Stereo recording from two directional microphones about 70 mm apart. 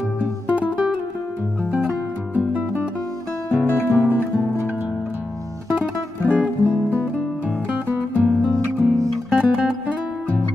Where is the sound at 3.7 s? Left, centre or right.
Left.